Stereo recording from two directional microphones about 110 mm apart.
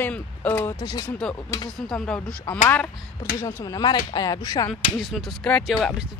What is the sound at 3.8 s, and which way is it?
Speech, 40° left (ahead or behind).